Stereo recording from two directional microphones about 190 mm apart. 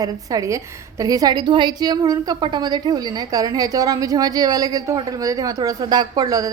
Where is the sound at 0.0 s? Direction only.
20° right (ahead or behind).